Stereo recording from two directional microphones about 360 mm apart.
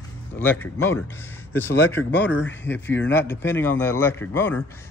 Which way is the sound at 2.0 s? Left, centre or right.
Left.